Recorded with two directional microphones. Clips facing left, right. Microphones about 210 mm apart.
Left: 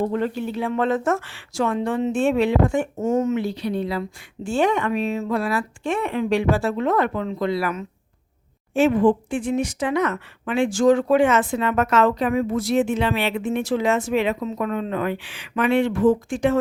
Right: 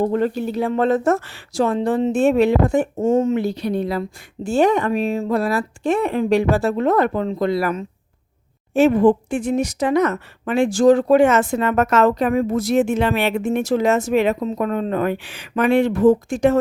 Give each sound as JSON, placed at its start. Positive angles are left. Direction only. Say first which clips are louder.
{"t": 0.0, "sound": "speech", "louder": "right 4 dB", "side_deg": -40}
{"t": 3.4, "sound": "speech", "louder": "right 3 dB", "side_deg": -45}